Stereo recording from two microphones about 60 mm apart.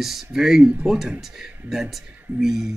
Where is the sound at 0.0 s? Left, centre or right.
Centre.